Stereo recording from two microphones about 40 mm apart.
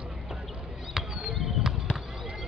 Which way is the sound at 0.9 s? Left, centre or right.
Centre.